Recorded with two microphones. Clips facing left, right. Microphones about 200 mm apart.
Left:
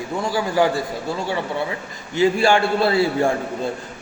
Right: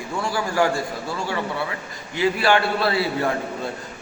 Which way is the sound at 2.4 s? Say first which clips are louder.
Left 3 dB; 25° left (ahead or behind).